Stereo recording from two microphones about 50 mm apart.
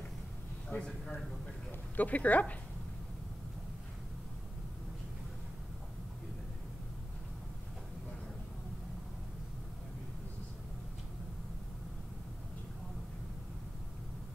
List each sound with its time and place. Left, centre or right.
0.7 s a man's voice: centre
1.7 s speech: left